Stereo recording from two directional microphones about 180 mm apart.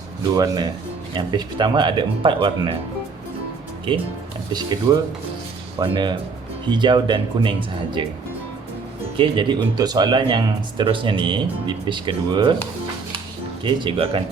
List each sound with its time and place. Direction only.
0.2 s speech: 20° right (ahead or behind)
4.5 s speech: 25° right (ahead or behind)
9.1 s speech: 25° right (ahead or behind)
13.7 s speech: 30° right (ahead or behind)